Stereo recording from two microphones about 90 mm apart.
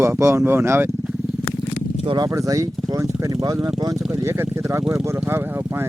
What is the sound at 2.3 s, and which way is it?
Speech, 35° right (ahead or behind).